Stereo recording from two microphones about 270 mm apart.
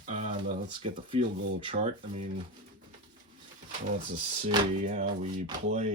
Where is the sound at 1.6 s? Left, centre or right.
Right.